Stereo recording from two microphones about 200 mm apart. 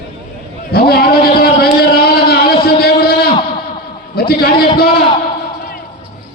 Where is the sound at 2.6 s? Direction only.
50° left (ahead or behind).